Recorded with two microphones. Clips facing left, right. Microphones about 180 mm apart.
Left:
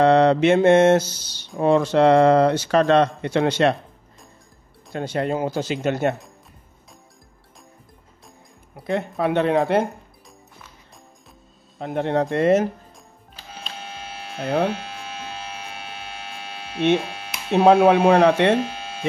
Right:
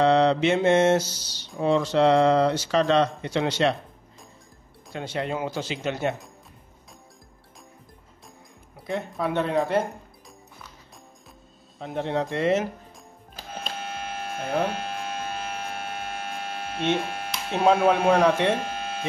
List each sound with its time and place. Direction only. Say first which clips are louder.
0.0 s speech: left 4 dB; 55° left (ahead or behind)
4.9 s speech: left 5 dB; 45° left (ahead or behind)
8.8 s speech: left 5 dB; 65° left (ahead or behind)
11.8 s speech: left 5 dB; 60° left (ahead or behind)
13.4 s electric shaver: right 3 dB; 50° right (ahead or behind)
17.5 s speech: left 6 dB; 60° left (ahead or behind)
18.6 s electric shaver: left 3 dB; 55° right (ahead or behind)